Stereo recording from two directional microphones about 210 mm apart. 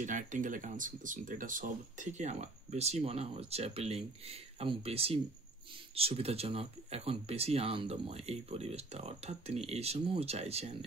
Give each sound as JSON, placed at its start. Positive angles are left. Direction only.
{"t": 0.0, "sound": "speech", "side_deg": -35}